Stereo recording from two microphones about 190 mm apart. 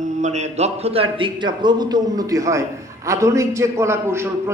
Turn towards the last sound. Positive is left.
turn(degrees=-15)  # may be behind; listen again after turning